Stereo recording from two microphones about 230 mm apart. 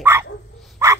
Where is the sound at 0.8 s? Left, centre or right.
Centre.